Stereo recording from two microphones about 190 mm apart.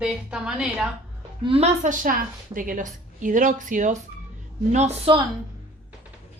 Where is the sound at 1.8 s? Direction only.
45° right (ahead or behind).